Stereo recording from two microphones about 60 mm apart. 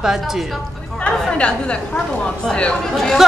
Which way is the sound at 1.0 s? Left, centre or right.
Centre.